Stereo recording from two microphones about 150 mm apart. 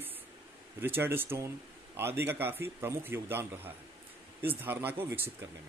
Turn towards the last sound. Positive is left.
turn(degrees=-15)  # may be behind; listen again after turning